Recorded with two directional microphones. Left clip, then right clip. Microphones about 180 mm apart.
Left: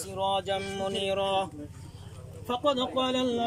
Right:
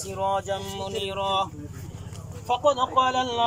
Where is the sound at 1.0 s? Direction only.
50° left (ahead or behind).